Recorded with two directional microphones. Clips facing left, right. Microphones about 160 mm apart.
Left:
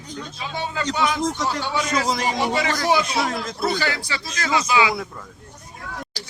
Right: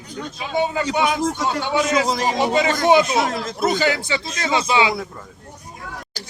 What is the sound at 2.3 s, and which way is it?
Speech, 20° right (ahead or behind).